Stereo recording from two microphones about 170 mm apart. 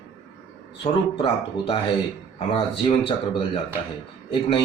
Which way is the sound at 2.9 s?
35° left (ahead or behind).